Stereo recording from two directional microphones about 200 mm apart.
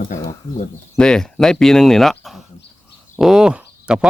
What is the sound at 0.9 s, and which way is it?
Speech, 5° left (ahead or behind).